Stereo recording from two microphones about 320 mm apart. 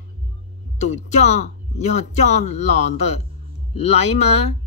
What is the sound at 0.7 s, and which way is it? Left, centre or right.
Speech, left.